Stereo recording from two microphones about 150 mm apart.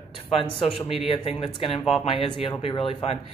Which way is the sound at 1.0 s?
40° left (ahead or behind).